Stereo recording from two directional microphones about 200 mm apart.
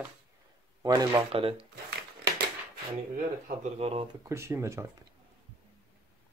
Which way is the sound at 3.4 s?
35° right (ahead or behind).